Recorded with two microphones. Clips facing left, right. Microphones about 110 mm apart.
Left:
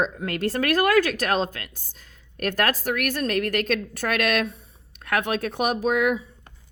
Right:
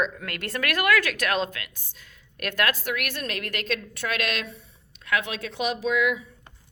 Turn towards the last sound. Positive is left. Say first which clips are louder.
# left 3 dB
turn(degrees=50)  # may be behind; listen again after turning